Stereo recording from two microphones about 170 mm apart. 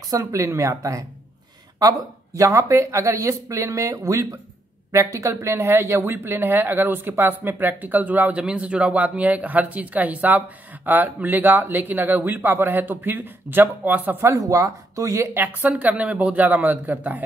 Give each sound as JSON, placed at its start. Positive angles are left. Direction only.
{"t": 0.1, "sound": "speech", "side_deg": -20}